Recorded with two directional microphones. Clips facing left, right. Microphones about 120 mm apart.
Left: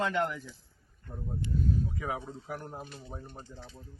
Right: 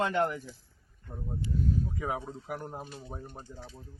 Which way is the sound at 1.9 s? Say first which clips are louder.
Right 2 dB; 15° right (ahead or behind).